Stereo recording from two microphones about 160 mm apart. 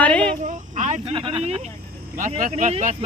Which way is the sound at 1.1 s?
30° right (ahead or behind).